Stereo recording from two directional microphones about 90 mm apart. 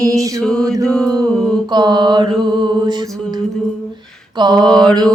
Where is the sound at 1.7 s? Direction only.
55° right (ahead or behind).